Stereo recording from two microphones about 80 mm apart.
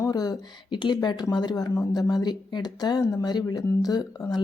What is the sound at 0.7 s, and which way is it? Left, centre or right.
A woman's voice, left.